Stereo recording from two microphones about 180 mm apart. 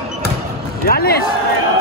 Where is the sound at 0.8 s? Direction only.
55° left (ahead or behind).